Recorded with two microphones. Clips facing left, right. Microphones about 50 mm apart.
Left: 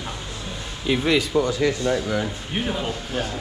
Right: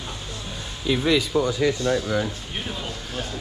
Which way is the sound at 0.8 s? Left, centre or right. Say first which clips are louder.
Left 1 dB; left.